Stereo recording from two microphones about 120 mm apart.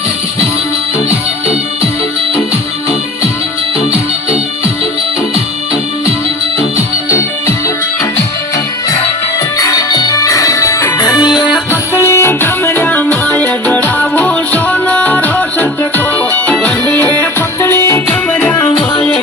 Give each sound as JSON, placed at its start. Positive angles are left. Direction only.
{"t": 7.1, "sound": "music", "side_deg": 25}
{"t": 9.6, "sound": "music", "side_deg": 30}
{"t": 11.0, "sound": "music", "side_deg": 35}
{"t": 11.7, "sound": "music", "side_deg": 20}